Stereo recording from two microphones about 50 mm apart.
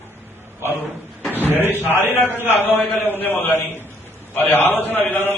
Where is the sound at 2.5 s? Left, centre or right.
Left.